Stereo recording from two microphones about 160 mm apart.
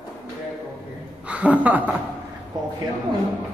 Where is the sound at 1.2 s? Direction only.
10° right (ahead or behind).